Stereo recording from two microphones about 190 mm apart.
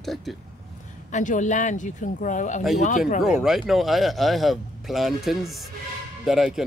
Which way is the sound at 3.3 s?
Centre (ahead or behind).